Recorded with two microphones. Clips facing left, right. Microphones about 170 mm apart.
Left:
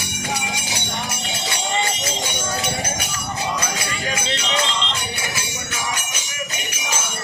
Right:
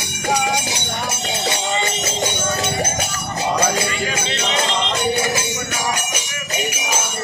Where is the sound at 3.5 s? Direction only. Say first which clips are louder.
Right 7 dB; 50° right (ahead or behind).